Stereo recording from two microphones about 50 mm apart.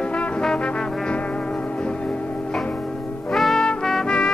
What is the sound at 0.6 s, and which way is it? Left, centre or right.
Trombone, left.